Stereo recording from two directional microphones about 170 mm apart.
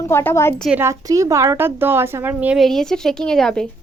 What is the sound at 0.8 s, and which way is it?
Speech, 20° right (ahead or behind).